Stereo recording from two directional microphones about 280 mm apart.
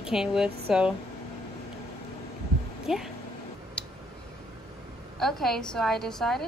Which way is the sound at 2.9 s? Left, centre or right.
Centre.